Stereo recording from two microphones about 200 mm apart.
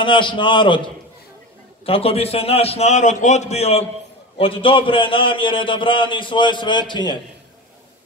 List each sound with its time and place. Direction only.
0.0 s a man's voice: 25° left (ahead or behind)